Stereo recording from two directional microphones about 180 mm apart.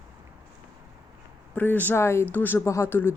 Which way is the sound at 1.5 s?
10° left (ahead or behind).